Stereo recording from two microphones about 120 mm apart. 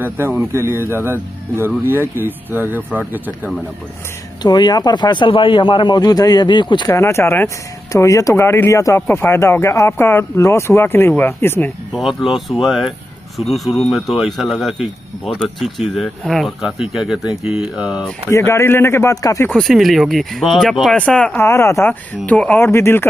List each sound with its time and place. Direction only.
0.0 s speech: 15° right (ahead or behind)
4.4 s speech: 35° left (ahead or behind)
6.9 s speech: 25° left (ahead or behind)
11.9 s speech: centre (ahead or behind)
18.3 s speech: 20° left (ahead or behind)
19.5 s speech: centre (ahead or behind)
21.4 s speech: 20° left (ahead or behind)